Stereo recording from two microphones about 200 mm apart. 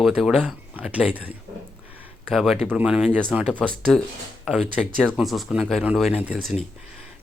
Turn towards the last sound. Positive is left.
turn(degrees=-5)  # may be behind; listen again after turning